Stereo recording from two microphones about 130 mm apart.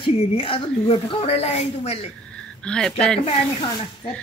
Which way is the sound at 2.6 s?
5° left (ahead or behind).